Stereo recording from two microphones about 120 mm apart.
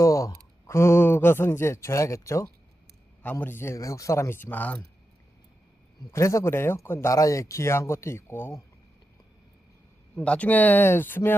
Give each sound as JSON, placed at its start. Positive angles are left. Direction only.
{"t": 0.0, "sound": "speech", "side_deg": 30}
{"t": 6.1, "sound": "speech", "side_deg": 25}
{"t": 10.2, "sound": "speech", "side_deg": 10}